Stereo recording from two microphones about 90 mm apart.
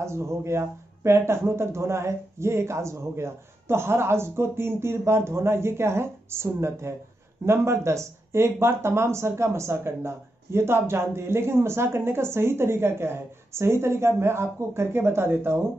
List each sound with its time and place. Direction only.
0.0 s speech: 30° right (ahead or behind)